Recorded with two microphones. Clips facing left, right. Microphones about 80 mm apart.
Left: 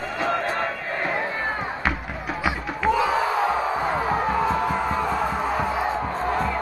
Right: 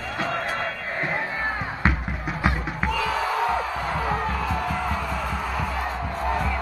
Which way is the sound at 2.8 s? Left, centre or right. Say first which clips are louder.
Left 5 dB; left.